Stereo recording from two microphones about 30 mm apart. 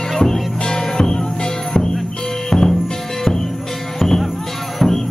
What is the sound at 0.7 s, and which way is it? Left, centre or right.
Music, left.